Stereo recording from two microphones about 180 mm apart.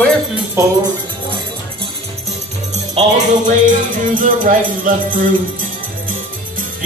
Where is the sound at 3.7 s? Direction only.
50° right (ahead or behind).